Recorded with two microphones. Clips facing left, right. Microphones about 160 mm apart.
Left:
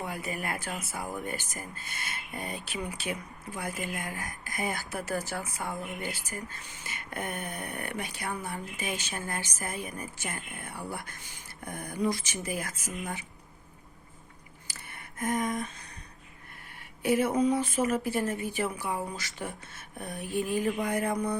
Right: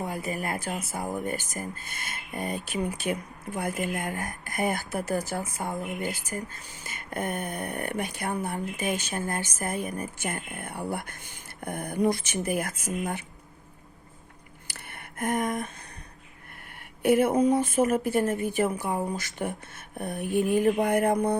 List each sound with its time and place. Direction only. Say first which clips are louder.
0.0 s speech: right 4 dB; 40° right (ahead or behind)
14.7 s a sound: right 3 dB; 60° right (ahead or behind)
17.0 s speech: right 4 dB; 55° right (ahead or behind)